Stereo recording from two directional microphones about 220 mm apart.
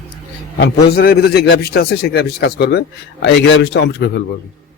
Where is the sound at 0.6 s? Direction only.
45° left (ahead or behind).